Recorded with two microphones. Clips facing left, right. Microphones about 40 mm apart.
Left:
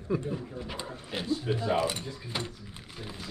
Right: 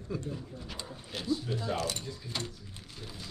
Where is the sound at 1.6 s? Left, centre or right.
Left.